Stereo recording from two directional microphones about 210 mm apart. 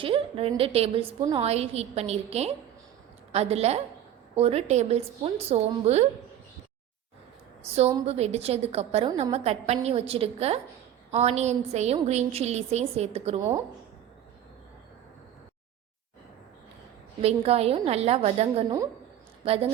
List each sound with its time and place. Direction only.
0.0 s a woman's voice: 25° right (ahead or behind)
7.7 s a woman's voice: 30° right (ahead or behind)
17.2 s a woman's voice: 30° right (ahead or behind)